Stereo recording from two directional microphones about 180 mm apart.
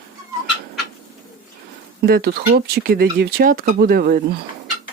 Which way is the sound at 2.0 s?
60° right (ahead or behind).